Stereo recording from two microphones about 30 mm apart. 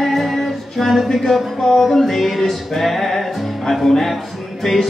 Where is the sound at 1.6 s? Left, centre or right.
Centre.